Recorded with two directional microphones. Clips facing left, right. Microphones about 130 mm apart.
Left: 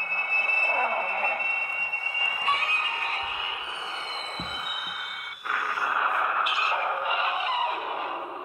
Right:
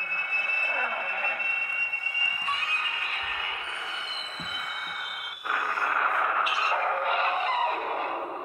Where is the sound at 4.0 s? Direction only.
35° left (ahead or behind).